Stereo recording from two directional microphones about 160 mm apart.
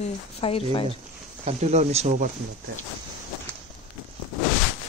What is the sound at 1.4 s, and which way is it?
Speech, 45° right (ahead or behind).